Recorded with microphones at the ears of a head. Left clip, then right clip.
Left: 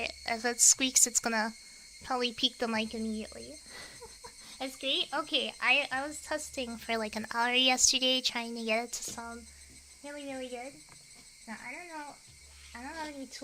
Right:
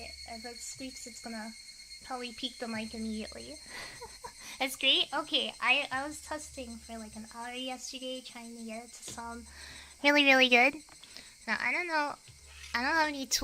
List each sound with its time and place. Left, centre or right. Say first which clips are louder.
0.0 s speech: left 10 dB; left
3.1 s speech: even; centre
5.1 s speech: even; centre
6.6 s speech: left 10 dB; left
10.0 s speech: right 18 dB; right